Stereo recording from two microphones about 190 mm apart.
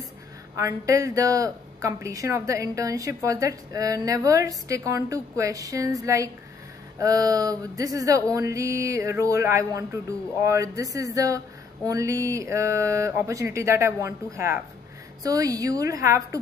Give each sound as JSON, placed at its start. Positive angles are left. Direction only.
{"t": 0.6, "sound": "speech", "side_deg": -15}